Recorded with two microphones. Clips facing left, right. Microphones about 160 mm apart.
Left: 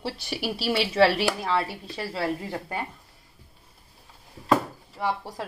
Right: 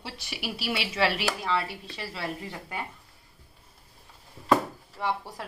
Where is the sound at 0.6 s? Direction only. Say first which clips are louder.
Left 7 dB; 30° left (ahead or behind).